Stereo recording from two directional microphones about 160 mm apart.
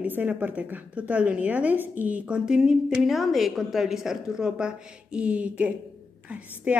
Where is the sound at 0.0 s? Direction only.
10° right (ahead or behind).